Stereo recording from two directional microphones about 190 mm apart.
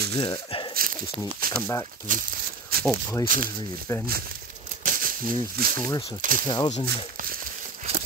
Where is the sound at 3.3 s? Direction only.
45° right (ahead or behind).